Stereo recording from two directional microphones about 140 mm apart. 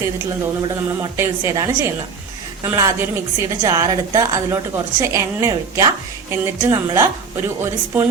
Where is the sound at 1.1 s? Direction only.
20° right (ahead or behind).